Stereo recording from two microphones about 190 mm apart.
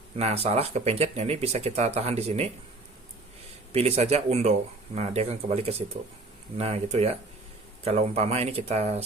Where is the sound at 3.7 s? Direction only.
35° right (ahead or behind).